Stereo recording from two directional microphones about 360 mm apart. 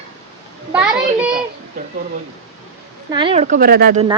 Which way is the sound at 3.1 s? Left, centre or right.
Centre.